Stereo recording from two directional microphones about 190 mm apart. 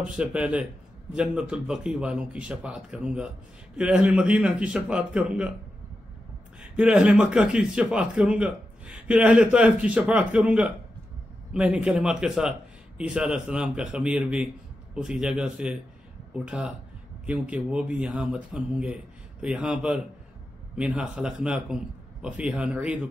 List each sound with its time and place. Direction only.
0.0 s a man's voice: 5° right (ahead or behind)
6.8 s a man's voice: 5° right (ahead or behind)